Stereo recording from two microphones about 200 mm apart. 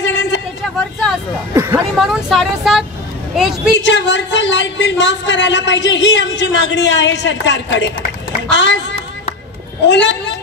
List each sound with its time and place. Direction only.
0.0 s a sound: 65° left (ahead or behind)
1.5 s speech: 15° right (ahead or behind)
2.0 s speech: centre (ahead or behind)
3.7 s speech: 65° left (ahead or behind)
9.8 s speech: 65° left (ahead or behind)